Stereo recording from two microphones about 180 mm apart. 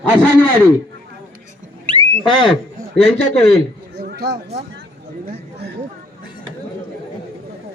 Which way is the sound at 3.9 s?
65° right (ahead or behind).